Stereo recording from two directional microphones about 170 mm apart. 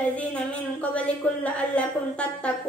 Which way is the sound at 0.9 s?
5° left (ahead or behind).